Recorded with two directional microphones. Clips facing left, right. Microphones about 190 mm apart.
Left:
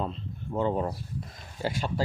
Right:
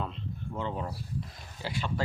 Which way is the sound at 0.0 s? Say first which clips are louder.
Left 3 dB; 35° left (ahead or behind).